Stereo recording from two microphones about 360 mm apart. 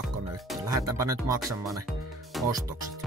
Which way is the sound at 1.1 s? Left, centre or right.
Centre.